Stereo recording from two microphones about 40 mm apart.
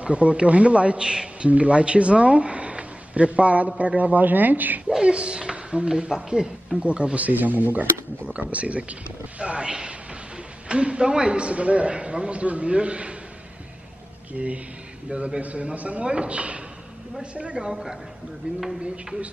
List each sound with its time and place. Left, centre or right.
0.0 s speech: right
4.8 s speech: right
8.3 s a man's voice: right
14.3 s speech: right; by 17.9 s centre
18.6 s speech: centre